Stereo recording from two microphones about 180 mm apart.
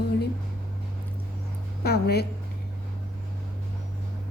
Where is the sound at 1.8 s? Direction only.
65° left (ahead or behind).